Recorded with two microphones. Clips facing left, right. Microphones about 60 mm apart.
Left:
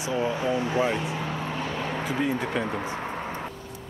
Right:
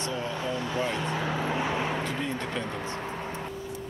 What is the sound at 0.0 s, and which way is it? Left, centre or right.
Speech, centre.